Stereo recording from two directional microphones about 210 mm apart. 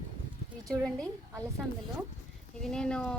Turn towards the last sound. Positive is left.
turn(degrees=5)  # may be behind; listen again after turning